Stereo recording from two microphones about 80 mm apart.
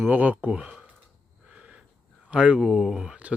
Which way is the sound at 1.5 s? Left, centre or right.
Centre.